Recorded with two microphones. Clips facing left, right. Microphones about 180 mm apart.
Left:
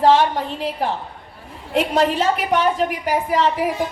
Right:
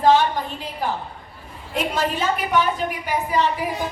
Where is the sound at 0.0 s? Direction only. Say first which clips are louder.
Left 2 dB; 80° left.